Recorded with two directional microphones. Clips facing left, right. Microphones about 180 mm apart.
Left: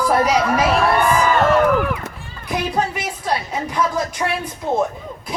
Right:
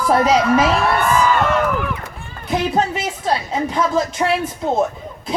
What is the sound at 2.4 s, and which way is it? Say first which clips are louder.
A woman's voice: right 3 dB; 25° right (ahead or behind).